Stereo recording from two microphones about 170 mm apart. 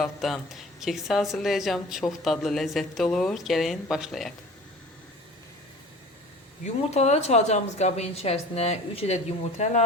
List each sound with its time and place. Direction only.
0.0 s speech: centre (ahead or behind)
6.9 s a woman's voice: 40° left (ahead or behind)